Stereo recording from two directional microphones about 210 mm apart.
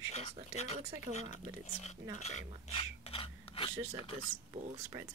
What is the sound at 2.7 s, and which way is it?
Filing, 25° left (ahead or behind).